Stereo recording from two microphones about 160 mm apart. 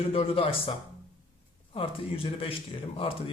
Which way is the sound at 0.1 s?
35° left (ahead or behind).